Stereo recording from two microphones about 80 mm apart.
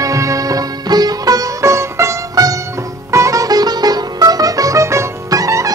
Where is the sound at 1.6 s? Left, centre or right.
Right.